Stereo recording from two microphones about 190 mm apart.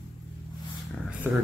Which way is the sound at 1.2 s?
10° right (ahead or behind).